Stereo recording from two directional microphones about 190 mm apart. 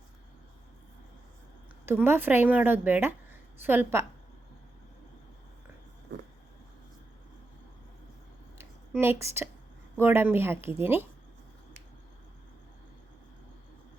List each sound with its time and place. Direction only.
1.9 s a woman's voice: 10° right (ahead or behind)
6.1 s vehicle: 70° right (ahead or behind)
8.5 s a sound: 10° right (ahead or behind)
10.0 s a woman's voice: 10° right (ahead or behind)